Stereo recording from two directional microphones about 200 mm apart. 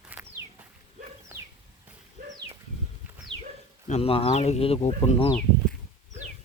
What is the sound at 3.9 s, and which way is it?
Speech, 30° left (ahead or behind).